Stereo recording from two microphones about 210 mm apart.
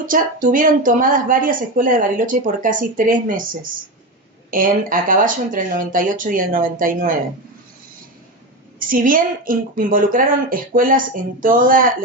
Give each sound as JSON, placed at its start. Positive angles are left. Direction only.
{"t": 0.1, "sound": "speech", "side_deg": -40}
{"t": 8.8, "sound": "speech", "side_deg": -40}